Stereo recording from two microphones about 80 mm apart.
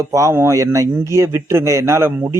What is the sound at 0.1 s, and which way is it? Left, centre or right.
Speech, right.